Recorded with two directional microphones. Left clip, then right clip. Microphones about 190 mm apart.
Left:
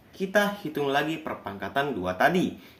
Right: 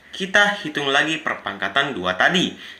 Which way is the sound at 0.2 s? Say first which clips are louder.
Right 8 dB; 5° right (ahead or behind).